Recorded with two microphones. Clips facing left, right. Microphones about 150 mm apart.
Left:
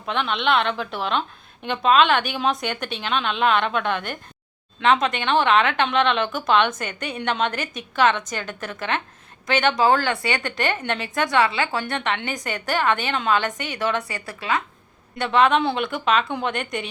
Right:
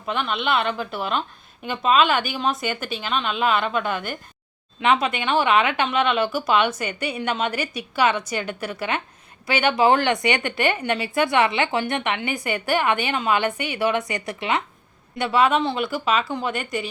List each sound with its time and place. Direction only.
0.0 s speech: 5° right (ahead or behind); by 14.6 s 20° right (ahead or behind)
15.2 s speech: 5° right (ahead or behind)